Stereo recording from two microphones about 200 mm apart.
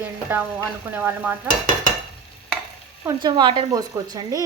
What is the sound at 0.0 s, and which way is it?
Stir, 10° right (ahead or behind).